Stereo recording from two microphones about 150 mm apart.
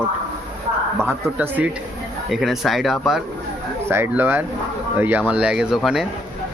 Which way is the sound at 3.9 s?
15° right (ahead or behind).